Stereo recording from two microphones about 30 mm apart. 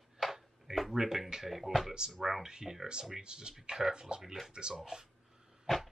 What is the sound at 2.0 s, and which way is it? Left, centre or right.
Speech, right.